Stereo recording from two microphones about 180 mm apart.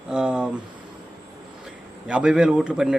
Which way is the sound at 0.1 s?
5° right (ahead or behind).